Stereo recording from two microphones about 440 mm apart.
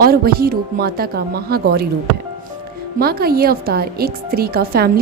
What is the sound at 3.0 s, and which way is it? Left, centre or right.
A woman's voice, right.